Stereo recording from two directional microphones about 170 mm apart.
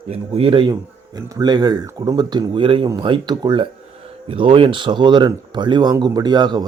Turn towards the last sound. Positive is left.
turn(degrees=-25)  # may be behind; listen again after turning